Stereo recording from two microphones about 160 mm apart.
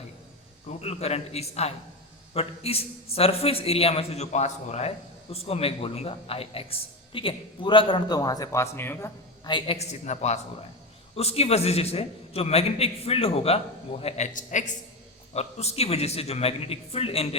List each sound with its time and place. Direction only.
0.7 s a man's voice: 40° left (ahead or behind); by 9.5 s 15° left (ahead or behind)
9.5 s a man's voice: 30° left (ahead or behind)
14.3 s a man's voice: 50° left (ahead or behind)